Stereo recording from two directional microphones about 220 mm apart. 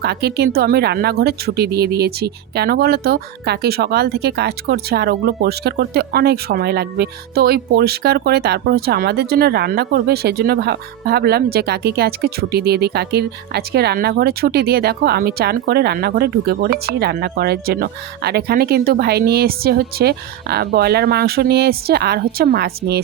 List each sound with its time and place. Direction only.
0.0 s speech: 50° right (ahead or behind)